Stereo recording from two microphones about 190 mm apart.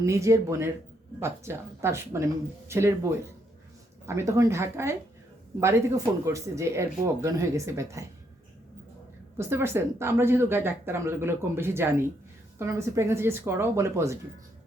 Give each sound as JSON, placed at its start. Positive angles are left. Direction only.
{"t": 0.0, "sound": "speech", "side_deg": -15}
{"t": 6.2, "sound": "speech", "side_deg": -15}
{"t": 9.4, "sound": "speech", "side_deg": -15}